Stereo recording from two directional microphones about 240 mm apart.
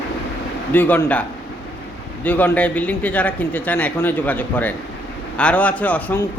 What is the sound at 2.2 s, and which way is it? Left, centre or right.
A man's voice, centre.